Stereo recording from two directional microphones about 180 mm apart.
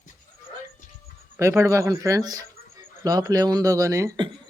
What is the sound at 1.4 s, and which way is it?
Speech, 15° right (ahead or behind).